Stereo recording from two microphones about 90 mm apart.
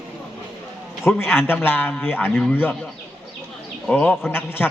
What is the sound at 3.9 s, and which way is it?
Speech, 20° left (ahead or behind).